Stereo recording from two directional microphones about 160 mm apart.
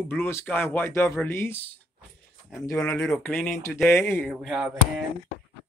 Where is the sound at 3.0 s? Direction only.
5° left (ahead or behind).